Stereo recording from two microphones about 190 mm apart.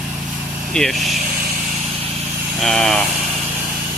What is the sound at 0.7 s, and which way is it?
Speech, 5° left (ahead or behind).